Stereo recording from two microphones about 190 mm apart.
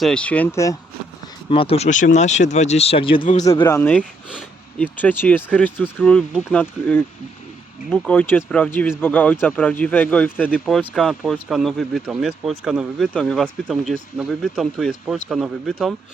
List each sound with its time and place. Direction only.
0.0 s speech: 5° left (ahead or behind)
1.5 s speech: 30° left (ahead or behind)
3.7 s speech: 10° left (ahead or behind)
4.3 s a sound: centre (ahead or behind)
4.9 s speech: 10° left (ahead or behind)